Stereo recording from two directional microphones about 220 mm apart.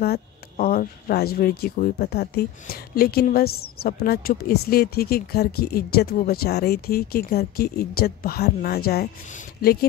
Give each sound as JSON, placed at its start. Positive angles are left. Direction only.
{"t": 0.0, "sound": "speech", "side_deg": 45}